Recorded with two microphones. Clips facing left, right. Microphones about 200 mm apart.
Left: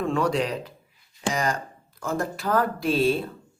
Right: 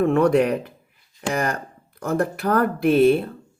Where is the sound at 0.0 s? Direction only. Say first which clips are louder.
Right 7 dB; 60° right (ahead or behind).